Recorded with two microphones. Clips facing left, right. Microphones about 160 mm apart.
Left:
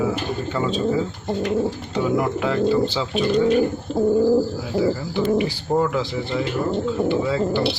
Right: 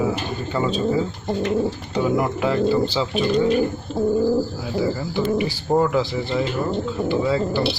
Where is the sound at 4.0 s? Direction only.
20° left (ahead or behind).